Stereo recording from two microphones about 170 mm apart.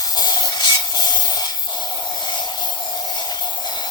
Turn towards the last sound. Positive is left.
turn(degrees=25)  # may be behind; listen again after turning